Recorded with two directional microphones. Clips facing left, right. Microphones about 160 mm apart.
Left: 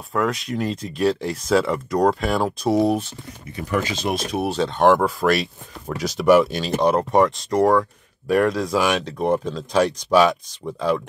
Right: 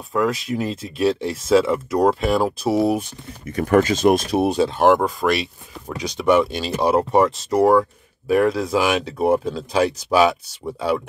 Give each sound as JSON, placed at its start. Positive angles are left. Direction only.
{"t": 0.1, "sound": "speech", "side_deg": 0}
{"t": 3.5, "sound": "speech", "side_deg": -50}
{"t": 4.5, "sound": "speech", "side_deg": -10}